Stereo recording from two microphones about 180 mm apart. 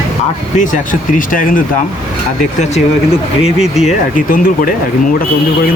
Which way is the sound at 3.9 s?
50° left (ahead or behind).